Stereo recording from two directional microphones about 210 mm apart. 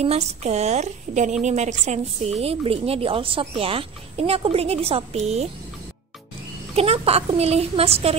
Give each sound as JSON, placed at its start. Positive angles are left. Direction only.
{"t": 0.0, "sound": "a woman's voice", "side_deg": -30}
{"t": 6.7, "sound": "a woman's voice", "side_deg": -30}